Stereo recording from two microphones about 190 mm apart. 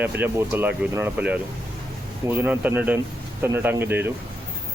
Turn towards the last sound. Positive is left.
turn(degrees=-10)  # may be behind; listen again after turning